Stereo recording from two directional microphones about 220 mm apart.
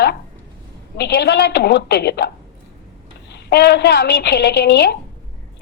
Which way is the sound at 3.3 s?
50° left (ahead or behind).